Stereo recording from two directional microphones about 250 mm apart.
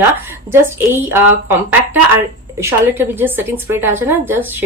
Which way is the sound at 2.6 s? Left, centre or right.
Centre.